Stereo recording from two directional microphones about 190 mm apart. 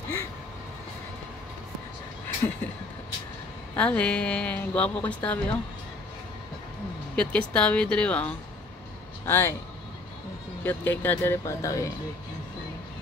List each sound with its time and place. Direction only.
3.7 s a woman's voice: 5° left (ahead or behind)
7.2 s a woman's voice: 5° left (ahead or behind)
10.6 s a woman's voice: 10° left (ahead or behind)